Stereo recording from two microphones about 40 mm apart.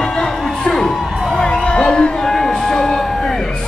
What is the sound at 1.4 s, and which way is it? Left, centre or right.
Music, left.